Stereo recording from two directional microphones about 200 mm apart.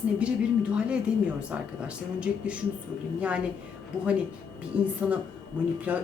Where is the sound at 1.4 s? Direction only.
5° right (ahead or behind).